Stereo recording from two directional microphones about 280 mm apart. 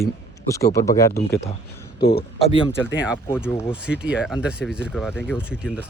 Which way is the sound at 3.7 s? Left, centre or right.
Centre.